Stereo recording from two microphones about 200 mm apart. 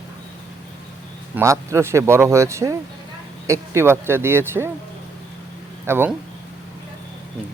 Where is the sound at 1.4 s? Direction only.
15° right (ahead or behind).